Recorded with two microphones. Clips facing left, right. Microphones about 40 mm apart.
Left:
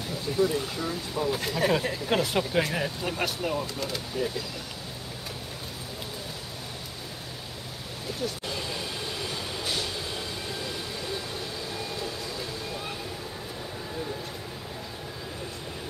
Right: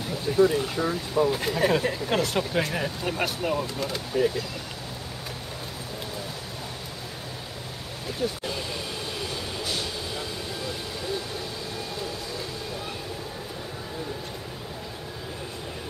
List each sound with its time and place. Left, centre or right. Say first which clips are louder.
0.3 s speech: right 5 dB; centre
1.3 s speech: right 2 dB; centre
2.0 s speech: right 1 dB; centre
8.2 s speech: right 4 dB; centre